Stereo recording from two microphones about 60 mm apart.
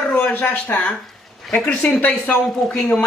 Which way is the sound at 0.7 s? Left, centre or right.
Left.